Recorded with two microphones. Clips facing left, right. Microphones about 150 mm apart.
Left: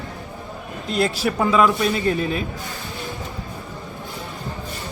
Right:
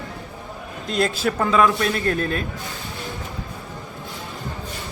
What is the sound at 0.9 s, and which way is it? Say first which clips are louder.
A man's voice: even; 5° left (ahead or behind).